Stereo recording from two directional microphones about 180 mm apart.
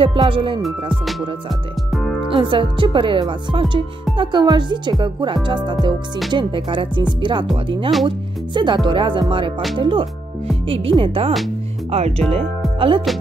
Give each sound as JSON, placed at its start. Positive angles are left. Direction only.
{"t": 0.0, "sound": "speech", "side_deg": -30}
{"t": 1.9, "sound": "music", "side_deg": 0}
{"t": 2.3, "sound": "speech", "side_deg": -30}